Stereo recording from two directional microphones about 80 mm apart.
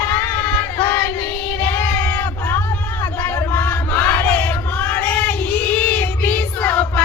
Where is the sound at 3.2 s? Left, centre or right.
Left.